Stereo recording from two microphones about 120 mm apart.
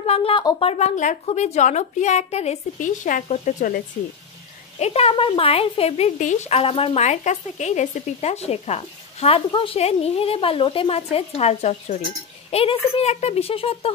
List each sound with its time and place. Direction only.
0.0 s a woman's voice: 55° left (ahead or behind)
0.6 s speech: 60° left (ahead or behind); by 3.6 s 85° left
4.7 s speech: 60° left (ahead or behind); by 6.6 s 85° left
6.6 s speech: 50° left (ahead or behind)
9.5 s a woman's voice: 50° left (ahead or behind)